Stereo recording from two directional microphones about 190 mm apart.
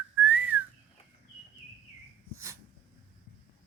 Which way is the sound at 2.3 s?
15° right (ahead or behind).